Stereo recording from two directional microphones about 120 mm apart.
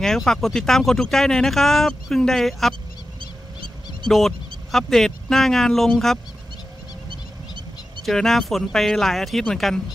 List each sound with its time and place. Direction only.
0.0 s speech: 5° left (ahead or behind)
3.2 s a sound: 45° right (ahead or behind)
4.1 s speech: centre (ahead or behind)
8.0 s speech: centre (ahead or behind)